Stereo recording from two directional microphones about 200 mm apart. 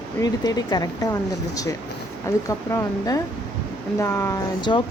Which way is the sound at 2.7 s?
15° left (ahead or behind).